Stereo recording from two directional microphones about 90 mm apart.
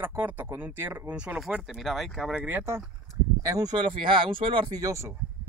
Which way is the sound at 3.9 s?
75° right (ahead or behind).